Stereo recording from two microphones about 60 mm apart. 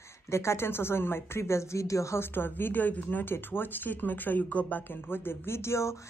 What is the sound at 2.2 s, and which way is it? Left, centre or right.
Speech, left.